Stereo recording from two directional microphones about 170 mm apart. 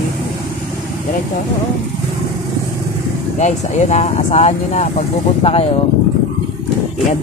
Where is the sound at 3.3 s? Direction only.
45° left (ahead or behind).